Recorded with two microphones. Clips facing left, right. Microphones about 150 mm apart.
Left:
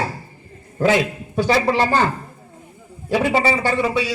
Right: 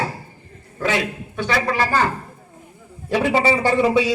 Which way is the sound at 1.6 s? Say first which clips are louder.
Left 2 dB; 25° left (ahead or behind).